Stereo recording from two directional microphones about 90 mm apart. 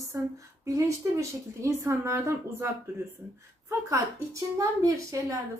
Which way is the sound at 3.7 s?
35° right (ahead or behind).